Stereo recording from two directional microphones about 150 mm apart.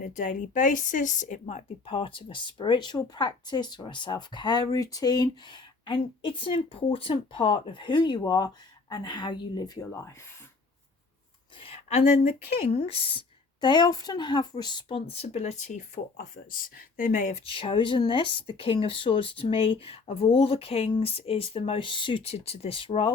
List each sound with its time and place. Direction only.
0.0 s a woman's voice: 55° left (ahead or behind)
1.9 s speech: 35° left (ahead or behind); by 10.1 s 20° left (ahead or behind)
11.6 s a sound: 45° left (ahead or behind)
12.7 s speech: 40° left (ahead or behind)
16.1 s speech: 70° left (ahead or behind); by 17.4 s 55° left (ahead or behind)
17.4 s speech: 35° left (ahead or behind)